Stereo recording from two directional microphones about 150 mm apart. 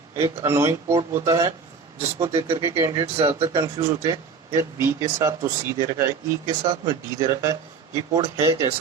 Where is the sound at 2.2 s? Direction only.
35° right (ahead or behind).